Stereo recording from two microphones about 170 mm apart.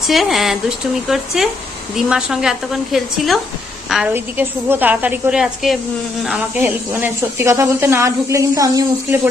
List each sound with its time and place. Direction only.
0.0 s a woman's voice: centre (ahead or behind); by 9.2 s 20° right (ahead or behind)